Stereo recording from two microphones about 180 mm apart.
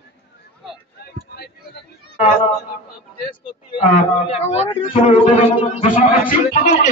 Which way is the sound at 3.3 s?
35° left (ahead or behind).